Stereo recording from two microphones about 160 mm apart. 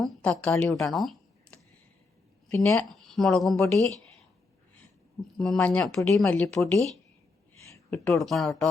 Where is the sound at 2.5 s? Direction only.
15° left (ahead or behind).